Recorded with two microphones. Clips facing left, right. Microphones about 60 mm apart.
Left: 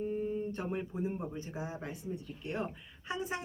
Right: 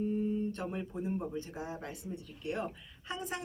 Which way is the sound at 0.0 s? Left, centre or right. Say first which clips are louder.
Right 2 dB; centre.